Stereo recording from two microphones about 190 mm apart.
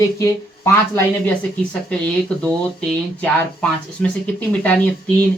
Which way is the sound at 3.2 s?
5° left (ahead or behind).